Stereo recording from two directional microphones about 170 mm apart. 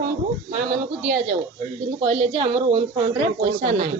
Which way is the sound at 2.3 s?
30° right (ahead or behind).